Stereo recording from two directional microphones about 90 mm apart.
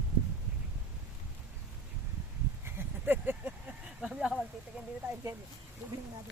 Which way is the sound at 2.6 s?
20° right (ahead or behind).